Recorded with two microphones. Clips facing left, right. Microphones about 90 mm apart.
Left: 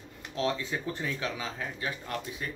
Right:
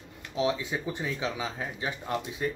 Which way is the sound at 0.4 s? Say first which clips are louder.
Right 2 dB; 15° right (ahead or behind).